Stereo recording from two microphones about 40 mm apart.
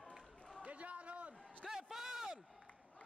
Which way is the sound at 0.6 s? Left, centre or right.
Right.